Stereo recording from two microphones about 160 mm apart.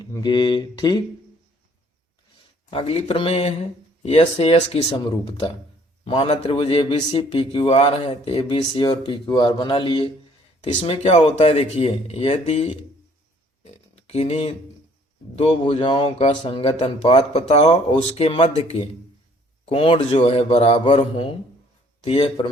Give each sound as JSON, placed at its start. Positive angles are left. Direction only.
{"t": 0.0, "sound": "speech", "side_deg": 25}
{"t": 2.6, "sound": "a man's voice", "side_deg": 35}
{"t": 4.9, "sound": "speech", "side_deg": 25}
{"t": 6.1, "sound": "a man's voice", "side_deg": 40}
{"t": 13.9, "sound": "a sound", "side_deg": 40}
{"t": 15.4, "sound": "a man's voice", "side_deg": 35}